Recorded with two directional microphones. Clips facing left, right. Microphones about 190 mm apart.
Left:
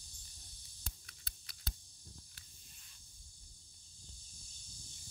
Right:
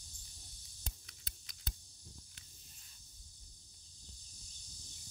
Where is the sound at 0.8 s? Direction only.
20° right (ahead or behind).